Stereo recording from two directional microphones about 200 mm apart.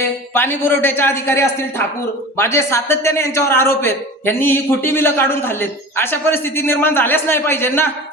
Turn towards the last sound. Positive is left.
turn(degrees=10)  # may be behind; listen again after turning